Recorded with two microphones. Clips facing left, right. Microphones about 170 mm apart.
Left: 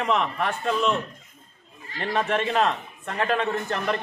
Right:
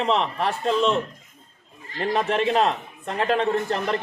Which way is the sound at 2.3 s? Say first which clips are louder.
Right 2 dB; 35° right (ahead or behind).